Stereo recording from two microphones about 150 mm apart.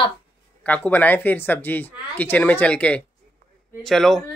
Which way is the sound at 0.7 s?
10° left (ahead or behind).